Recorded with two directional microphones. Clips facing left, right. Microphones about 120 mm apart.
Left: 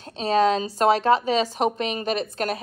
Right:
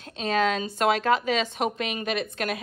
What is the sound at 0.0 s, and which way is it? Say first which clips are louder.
A woman's voice: left 5 dB; 30° left (ahead or behind).